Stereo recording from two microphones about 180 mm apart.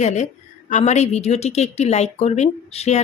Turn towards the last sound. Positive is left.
turn(degrees=35)  # may be behind; listen again after turning